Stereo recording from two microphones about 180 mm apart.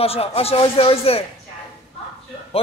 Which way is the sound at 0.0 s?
35° left (ahead or behind).